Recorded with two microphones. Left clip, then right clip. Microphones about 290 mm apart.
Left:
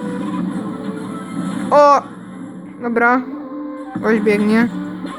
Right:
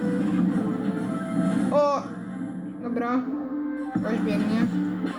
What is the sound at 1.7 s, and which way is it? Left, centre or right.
Speech, left.